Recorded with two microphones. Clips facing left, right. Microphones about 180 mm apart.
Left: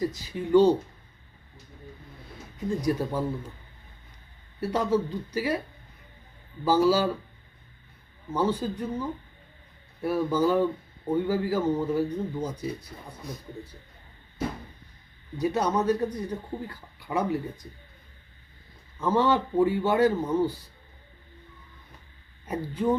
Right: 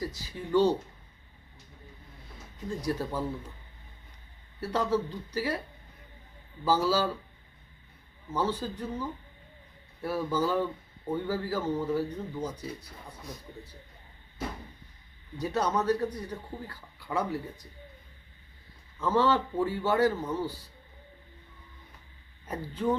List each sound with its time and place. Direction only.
0.0 s a man's voice: 20° left (ahead or behind)
2.8 s a man's voice: 15° left (ahead or behind)
4.6 s a man's voice: 15° left (ahead or behind)
6.7 s a man's voice: 15° left (ahead or behind)
8.3 s a man's voice: 15° left (ahead or behind)
15.4 s a man's voice: 15° left (ahead or behind)
18.9 s a man's voice: 15° left (ahead or behind)
22.4 s a man's voice: 15° left (ahead or behind)